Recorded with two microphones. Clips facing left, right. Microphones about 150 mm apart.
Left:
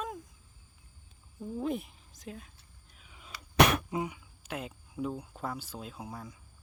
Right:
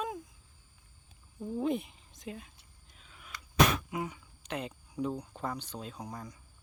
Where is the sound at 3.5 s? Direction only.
70° left (ahead or behind).